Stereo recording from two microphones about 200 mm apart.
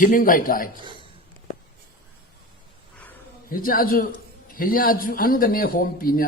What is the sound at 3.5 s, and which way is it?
A man's voice, 45° left (ahead or behind).